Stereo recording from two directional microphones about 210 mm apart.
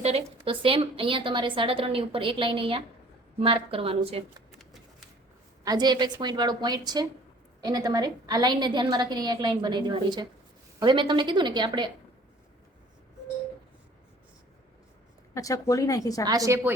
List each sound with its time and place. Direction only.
0.0 s a woman's voice: 25° right (ahead or behind)
4.5 s shuffling cards: centre (ahead or behind)
5.6 s a woman's voice: 20° right (ahead or behind)
15.4 s speech: 15° left (ahead or behind)
16.2 s a woman's voice: 15° right (ahead or behind)